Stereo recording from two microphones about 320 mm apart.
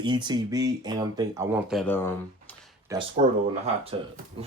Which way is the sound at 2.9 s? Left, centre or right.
Centre.